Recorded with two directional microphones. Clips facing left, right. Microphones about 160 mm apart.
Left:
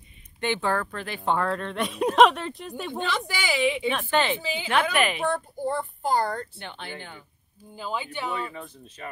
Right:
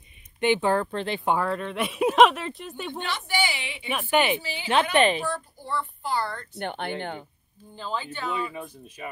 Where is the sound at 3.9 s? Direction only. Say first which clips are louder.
Right 1 dB; 15° right (ahead or behind).